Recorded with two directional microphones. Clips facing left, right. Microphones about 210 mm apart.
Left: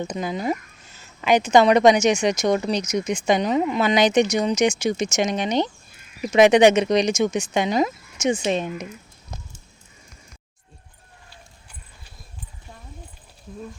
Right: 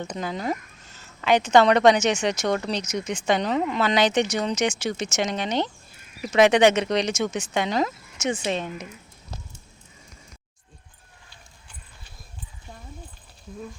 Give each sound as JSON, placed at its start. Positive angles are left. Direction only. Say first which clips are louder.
{"t": 0.0, "sound": "speech", "louder": "left 3 dB", "side_deg": 10}